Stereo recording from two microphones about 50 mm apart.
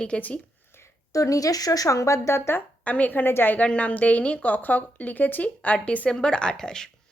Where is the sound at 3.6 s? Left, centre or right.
Left.